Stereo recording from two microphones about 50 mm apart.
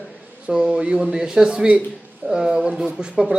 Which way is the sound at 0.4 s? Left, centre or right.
Right.